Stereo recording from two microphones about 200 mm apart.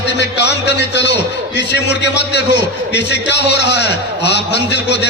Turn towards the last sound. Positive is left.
turn(degrees=60)  # may be behind; listen again after turning